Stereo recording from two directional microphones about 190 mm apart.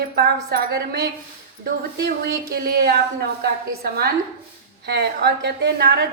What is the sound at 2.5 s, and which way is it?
A woman's voice, 55° right (ahead or behind).